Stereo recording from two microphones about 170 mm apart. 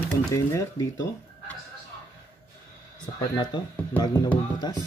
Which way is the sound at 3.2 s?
25° left (ahead or behind).